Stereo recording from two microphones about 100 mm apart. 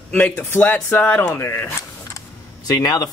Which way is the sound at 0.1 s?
20° left (ahead or behind).